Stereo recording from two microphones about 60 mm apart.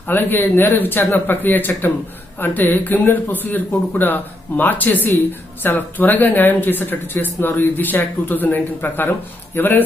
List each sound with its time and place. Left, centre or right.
0.1 s speech: left